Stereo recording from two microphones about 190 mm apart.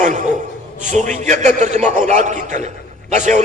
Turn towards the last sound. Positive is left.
turn(degrees=-40)  # may be behind; listen again after turning